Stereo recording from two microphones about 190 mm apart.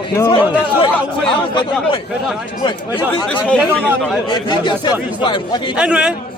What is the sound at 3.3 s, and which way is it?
Speech, 5° left (ahead or behind).